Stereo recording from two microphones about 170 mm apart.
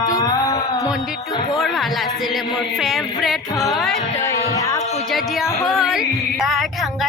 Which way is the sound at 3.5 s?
Centre (ahead or behind).